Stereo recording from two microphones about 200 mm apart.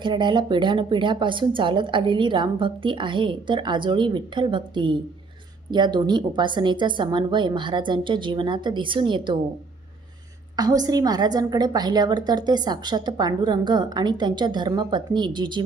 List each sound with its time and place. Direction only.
0.0 s a woman's voice: 25° right (ahead or behind)
10.6 s a woman's voice: 20° right (ahead or behind)